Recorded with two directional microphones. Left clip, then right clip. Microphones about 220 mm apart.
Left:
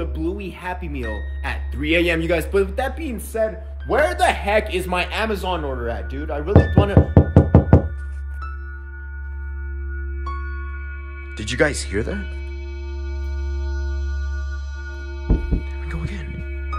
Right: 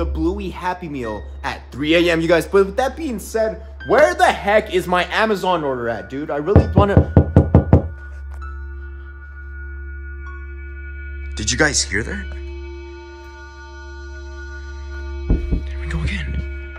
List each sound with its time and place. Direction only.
0.0 s a man's voice: 15° right (ahead or behind)
5.4 s speech: 55° right (ahead or behind)
5.9 s speech: 20° right (ahead or behind)
7.2 s knock: centre (ahead or behind)
11.3 s speech: centre (ahead or behind)
15.0 s music: centre (ahead or behind)